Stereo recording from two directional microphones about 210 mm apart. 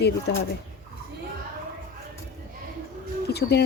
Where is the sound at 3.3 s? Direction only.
50° left (ahead or behind).